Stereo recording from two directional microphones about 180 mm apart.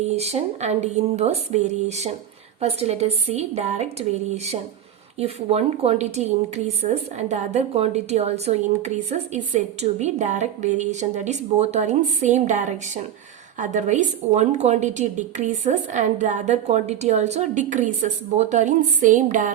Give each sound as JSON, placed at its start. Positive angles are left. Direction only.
{"t": 0.0, "sound": "a woman's voice", "side_deg": -35}
{"t": 5.2, "sound": "a woman's voice", "side_deg": -35}